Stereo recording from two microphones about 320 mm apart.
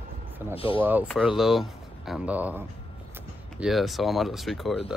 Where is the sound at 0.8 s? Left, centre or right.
Centre.